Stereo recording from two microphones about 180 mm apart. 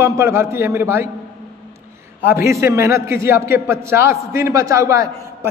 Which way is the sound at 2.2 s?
15° right (ahead or behind).